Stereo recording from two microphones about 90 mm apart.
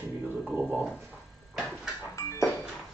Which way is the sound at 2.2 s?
30° left (ahead or behind).